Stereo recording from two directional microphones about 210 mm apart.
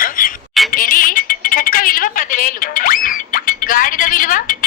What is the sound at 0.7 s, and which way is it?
Telephone, 40° left (ahead or behind).